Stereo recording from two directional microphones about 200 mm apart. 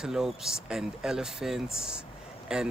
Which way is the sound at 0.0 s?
Centre (ahead or behind).